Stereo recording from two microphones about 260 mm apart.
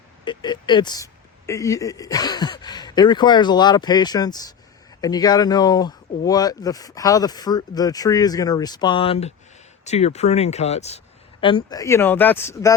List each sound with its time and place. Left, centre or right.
0.3 s speech: centre